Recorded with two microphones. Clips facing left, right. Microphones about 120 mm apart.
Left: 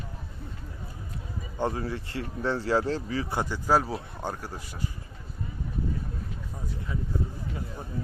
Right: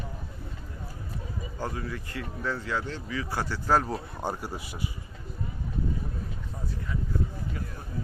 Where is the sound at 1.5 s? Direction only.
25° left (ahead or behind).